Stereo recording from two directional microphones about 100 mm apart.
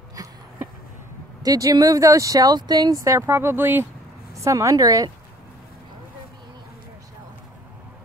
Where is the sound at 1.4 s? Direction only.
35° right (ahead or behind); by 3.9 s 20° right (ahead or behind).